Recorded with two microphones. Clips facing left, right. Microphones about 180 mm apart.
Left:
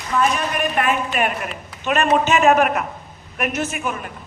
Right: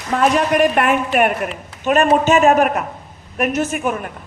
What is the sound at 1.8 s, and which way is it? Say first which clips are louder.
A man's voice: right 4 dB; 40° right (ahead or behind).